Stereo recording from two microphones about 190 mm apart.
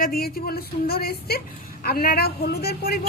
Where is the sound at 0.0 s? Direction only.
55° left (ahead or behind).